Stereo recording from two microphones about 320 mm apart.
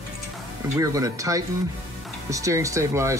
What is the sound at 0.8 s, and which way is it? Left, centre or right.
Speech, centre.